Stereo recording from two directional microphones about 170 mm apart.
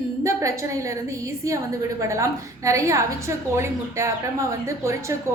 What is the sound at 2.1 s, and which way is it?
A woman's voice, 15° right (ahead or behind).